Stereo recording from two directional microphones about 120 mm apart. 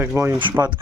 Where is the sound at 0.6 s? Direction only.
30° right (ahead or behind).